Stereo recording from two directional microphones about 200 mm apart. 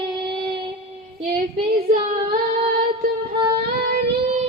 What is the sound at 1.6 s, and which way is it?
Child singing, 45° right (ahead or behind).